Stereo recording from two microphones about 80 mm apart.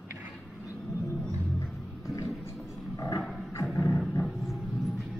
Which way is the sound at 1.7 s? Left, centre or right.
Centre.